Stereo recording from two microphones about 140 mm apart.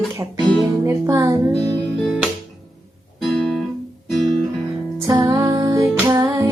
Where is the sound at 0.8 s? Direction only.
25° right (ahead or behind).